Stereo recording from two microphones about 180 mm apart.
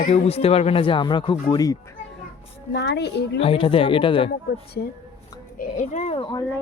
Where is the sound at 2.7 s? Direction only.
70° left (ahead or behind).